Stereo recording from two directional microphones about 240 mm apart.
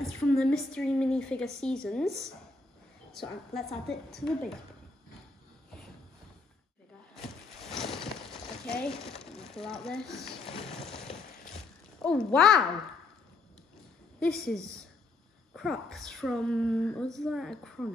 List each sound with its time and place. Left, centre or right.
0.4 s speech: centre
7.6 s a sound: centre
9.1 s speech: centre
10.3 s a sound: left
12.0 s speech: centre
14.2 s speech: centre